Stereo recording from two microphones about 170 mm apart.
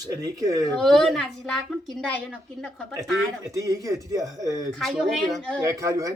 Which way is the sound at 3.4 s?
20° right (ahead or behind).